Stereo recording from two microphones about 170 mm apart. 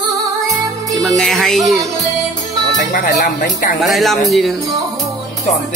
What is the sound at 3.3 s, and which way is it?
Speech, 50° left (ahead or behind).